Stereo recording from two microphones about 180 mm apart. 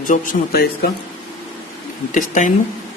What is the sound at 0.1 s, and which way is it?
Speech, 60° left (ahead or behind).